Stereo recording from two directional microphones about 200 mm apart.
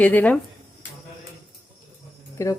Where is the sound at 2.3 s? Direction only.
15° left (ahead or behind).